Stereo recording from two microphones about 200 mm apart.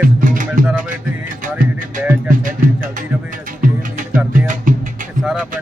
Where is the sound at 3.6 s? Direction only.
40° right (ahead or behind).